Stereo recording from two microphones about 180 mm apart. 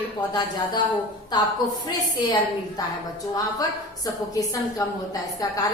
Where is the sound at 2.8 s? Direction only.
20° left (ahead or behind).